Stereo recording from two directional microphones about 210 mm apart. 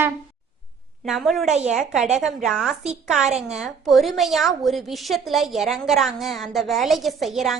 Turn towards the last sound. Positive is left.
turn(degrees=0)  # may be behind; listen again after turning